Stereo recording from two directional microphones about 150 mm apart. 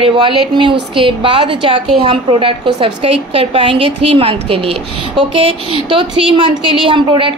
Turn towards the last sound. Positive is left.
turn(degrees=-35)  # may be behind; listen again after turning